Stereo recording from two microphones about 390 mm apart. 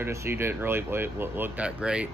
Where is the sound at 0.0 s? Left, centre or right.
Centre.